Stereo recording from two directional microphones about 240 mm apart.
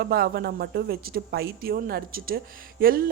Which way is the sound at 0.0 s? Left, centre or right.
Right.